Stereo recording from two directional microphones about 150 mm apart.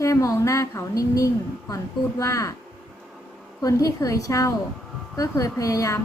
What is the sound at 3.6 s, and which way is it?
A woman's voice, 25° left (ahead or behind).